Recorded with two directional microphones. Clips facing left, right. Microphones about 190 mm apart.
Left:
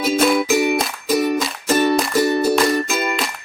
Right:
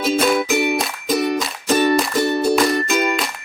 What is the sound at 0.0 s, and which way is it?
Music, 5° left (ahead or behind).